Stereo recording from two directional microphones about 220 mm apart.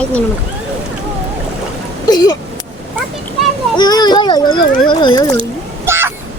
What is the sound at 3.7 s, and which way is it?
A child's voice, 20° left (ahead or behind).